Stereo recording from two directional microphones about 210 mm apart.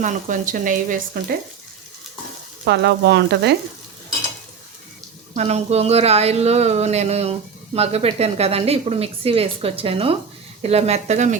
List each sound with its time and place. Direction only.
0.0 s speech: 35° right (ahead or behind)
2.6 s frying: 55° right (ahead or behind)
5.3 s a woman's voice: 30° right (ahead or behind)